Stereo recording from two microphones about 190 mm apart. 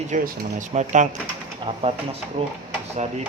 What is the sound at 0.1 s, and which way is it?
Speech, 40° right (ahead or behind).